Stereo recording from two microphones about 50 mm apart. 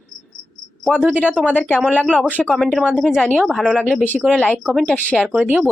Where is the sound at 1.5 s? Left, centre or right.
Left.